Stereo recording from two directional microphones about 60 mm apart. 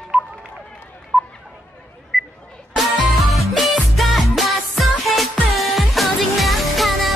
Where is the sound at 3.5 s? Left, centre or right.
Centre.